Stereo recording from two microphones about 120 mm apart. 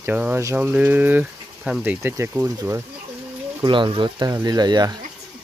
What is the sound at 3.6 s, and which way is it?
Speech, 40° right (ahead or behind).